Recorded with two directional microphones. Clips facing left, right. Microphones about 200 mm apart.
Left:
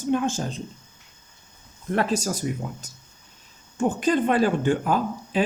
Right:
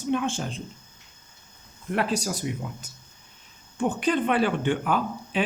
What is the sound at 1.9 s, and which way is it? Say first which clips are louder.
Speech: left 2 dB; 45° left (ahead or behind).